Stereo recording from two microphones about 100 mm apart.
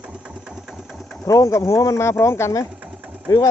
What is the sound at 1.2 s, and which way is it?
Speech, 35° left (ahead or behind).